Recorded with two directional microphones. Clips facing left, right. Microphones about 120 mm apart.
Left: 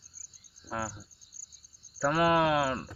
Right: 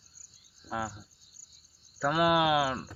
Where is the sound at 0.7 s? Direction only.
5° left (ahead or behind).